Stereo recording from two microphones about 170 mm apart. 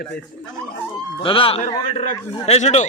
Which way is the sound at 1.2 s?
30° left (ahead or behind).